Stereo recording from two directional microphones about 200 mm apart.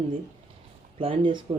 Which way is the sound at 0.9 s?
25° right (ahead or behind).